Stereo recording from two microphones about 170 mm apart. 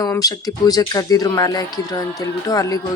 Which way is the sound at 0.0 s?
20° left (ahead or behind).